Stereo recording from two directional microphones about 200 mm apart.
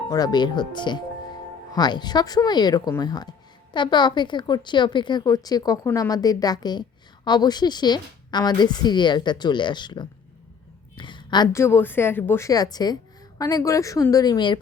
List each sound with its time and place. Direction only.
0.1 s a woman's voice: 20° left (ahead or behind)